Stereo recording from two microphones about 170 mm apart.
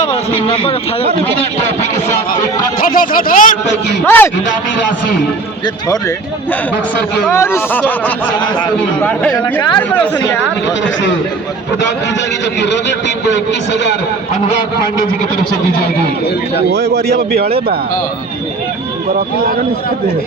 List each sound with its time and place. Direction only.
0.0 s speech: 30° left (ahead or behind)
2.7 s speech: 55° left (ahead or behind)
4.0 s a man's voice: 10° left (ahead or behind)
5.6 s a man's voice: 20° left (ahead or behind)
9.4 s speech: 25° left (ahead or behind)
12.5 s a man's voice: 90° left
16.9 s speech: 75° right (ahead or behind)